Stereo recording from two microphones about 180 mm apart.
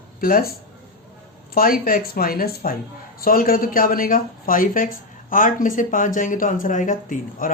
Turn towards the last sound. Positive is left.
turn(degrees=45)  # may be behind; listen again after turning